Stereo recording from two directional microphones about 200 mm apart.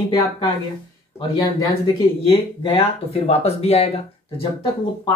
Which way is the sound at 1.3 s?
20° left (ahead or behind).